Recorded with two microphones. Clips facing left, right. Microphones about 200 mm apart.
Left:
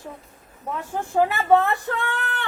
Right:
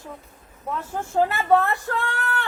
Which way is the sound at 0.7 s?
15° left (ahead or behind).